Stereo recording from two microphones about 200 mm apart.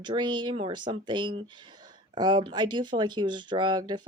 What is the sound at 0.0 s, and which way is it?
Speech, 25° right (ahead or behind).